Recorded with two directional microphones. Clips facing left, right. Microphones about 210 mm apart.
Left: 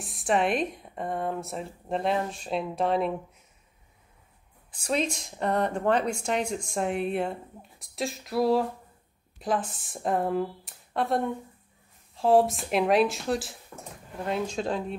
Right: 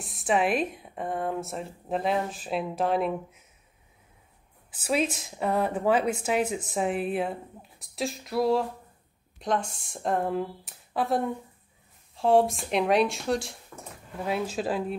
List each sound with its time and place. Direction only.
0.0 s speech: centre (ahead or behind)
4.6 s speech: 5° right (ahead or behind)